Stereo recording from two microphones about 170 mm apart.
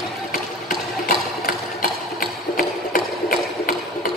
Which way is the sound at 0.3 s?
60° left (ahead or behind).